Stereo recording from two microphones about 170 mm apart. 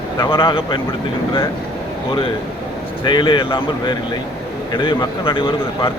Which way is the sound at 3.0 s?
25° left (ahead or behind).